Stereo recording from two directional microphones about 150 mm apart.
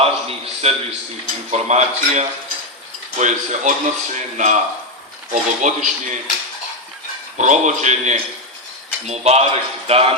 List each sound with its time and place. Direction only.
0.0 s a man's voice: 40° right (ahead or behind); by 6.1 s 55° right (ahead or behind)
7.3 s speech: 55° right (ahead or behind)